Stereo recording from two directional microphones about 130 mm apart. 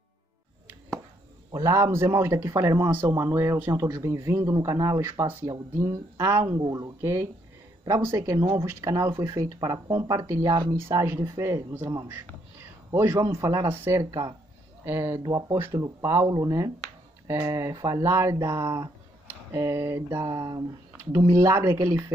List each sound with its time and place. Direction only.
1.5 s speech: 25° right (ahead or behind)
12.9 s speech: 20° right (ahead or behind)